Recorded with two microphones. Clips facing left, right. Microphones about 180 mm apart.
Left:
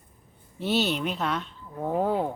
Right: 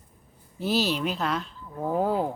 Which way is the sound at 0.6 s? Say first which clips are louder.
Even; centre (ahead or behind).